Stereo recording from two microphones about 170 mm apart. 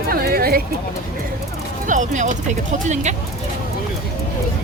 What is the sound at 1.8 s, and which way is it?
Speech, 50° right (ahead or behind).